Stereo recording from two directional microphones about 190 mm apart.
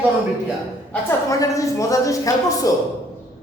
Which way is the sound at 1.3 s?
15° left (ahead or behind).